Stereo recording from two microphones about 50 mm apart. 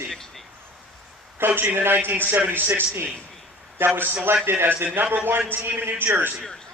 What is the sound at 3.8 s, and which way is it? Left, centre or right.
A man's voice, right.